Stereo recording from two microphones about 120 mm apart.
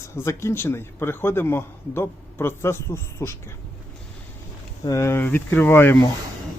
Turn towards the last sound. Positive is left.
turn(degrees=20)  # may be behind; listen again after turning